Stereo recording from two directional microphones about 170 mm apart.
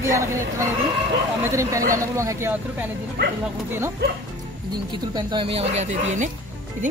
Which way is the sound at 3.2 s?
85° right.